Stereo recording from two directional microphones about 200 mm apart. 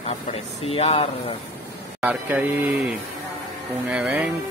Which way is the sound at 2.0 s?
5° right (ahead or behind).